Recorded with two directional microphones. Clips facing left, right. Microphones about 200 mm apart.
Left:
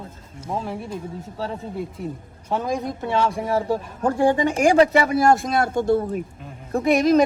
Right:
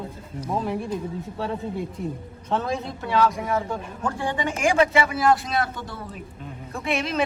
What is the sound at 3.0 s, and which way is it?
Speech, 25° left (ahead or behind).